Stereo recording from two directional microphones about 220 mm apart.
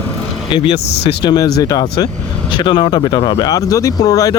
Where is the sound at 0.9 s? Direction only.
50° left (ahead or behind).